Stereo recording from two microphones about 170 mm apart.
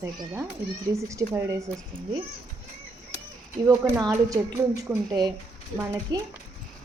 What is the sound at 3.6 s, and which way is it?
Speech, 20° right (ahead or behind).